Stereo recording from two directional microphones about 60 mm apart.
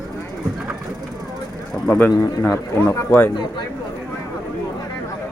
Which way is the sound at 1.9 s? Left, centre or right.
Left.